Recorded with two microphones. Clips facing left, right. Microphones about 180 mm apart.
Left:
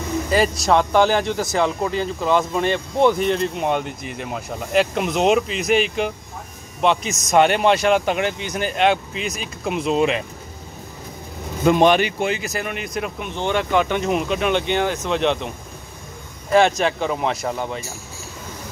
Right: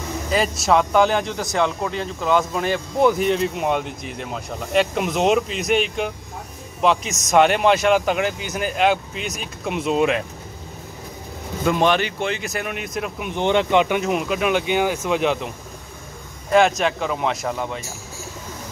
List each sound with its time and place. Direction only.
0.3 s speech: centre (ahead or behind)
11.6 s speech: 20° left (ahead or behind); by 13.3 s centre (ahead or behind)
13.3 s speech: 20° right (ahead or behind)
13.9 s speech: 5° right (ahead or behind)
16.5 s speech: centre (ahead or behind)